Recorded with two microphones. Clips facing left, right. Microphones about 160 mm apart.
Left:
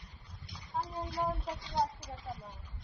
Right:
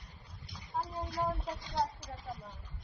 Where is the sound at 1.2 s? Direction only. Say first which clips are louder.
Even; 10° left (ahead or behind).